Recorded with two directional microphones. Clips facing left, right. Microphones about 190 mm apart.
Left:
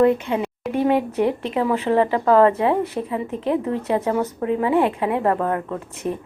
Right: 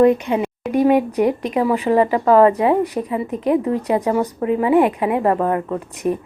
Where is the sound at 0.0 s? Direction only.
15° right (ahead or behind).